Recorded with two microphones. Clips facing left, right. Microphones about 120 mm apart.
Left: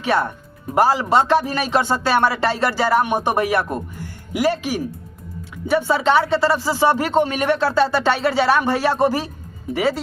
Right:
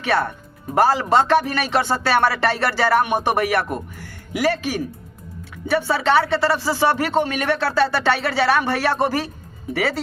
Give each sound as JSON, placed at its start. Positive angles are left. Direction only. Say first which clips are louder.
{"t": 0.8, "sound": "speech", "louder": "even", "side_deg": 15}